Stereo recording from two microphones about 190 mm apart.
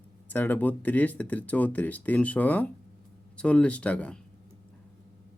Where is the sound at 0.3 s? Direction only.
10° left (ahead or behind).